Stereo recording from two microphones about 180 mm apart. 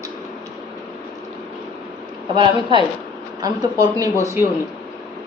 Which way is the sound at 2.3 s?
25° right (ahead or behind).